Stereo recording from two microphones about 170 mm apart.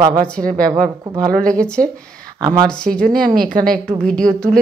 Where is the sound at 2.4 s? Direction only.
20° right (ahead or behind).